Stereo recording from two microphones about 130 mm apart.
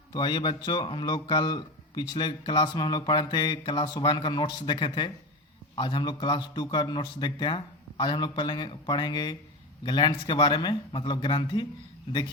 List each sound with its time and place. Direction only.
0.1 s a man's voice: 35° left (ahead or behind)